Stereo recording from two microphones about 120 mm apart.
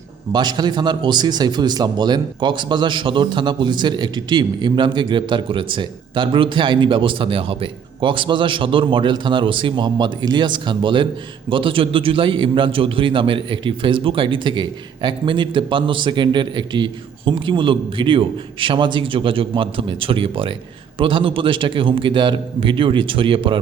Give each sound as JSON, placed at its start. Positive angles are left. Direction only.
{"t": 0.3, "sound": "a man's voice", "side_deg": -35}